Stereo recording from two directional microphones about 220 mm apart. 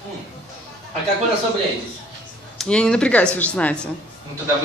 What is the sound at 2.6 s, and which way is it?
A woman's voice, 5° left (ahead or behind).